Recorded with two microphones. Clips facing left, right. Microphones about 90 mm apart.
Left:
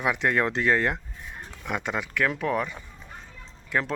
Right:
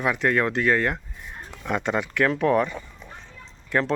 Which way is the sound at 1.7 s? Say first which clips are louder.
Right 5 dB; centre (ahead or behind).